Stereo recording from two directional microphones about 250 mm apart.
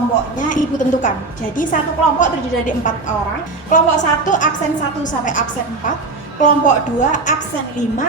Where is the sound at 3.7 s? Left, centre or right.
Left.